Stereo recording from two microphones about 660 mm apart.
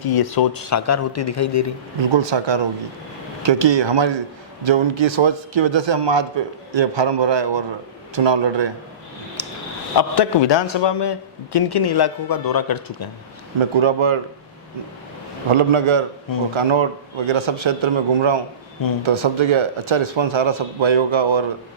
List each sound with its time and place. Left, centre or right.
0.0 s speech: left
2.0 s a man's voice: right
9.4 s a sound: left
10.0 s a man's voice: left
13.7 s a man's voice: right
15.4 s a man's voice: right